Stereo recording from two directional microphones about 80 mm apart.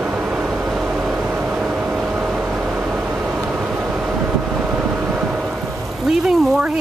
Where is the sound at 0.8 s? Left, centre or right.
Centre.